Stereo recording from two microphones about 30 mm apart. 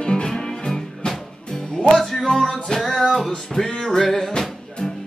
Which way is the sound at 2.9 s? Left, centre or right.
Centre.